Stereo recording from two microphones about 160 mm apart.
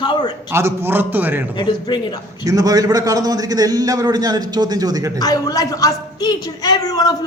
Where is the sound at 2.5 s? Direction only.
25° right (ahead or behind).